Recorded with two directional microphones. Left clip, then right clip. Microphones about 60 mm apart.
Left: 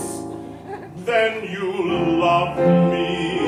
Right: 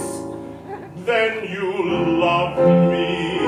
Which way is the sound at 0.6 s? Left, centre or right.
Left.